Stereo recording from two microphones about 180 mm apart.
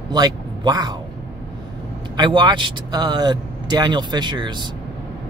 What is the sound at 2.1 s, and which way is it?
Speech, 25° right (ahead or behind).